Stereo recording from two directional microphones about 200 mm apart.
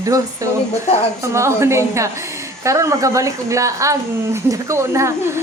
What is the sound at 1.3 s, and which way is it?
A woman's voice, 15° right (ahead or behind).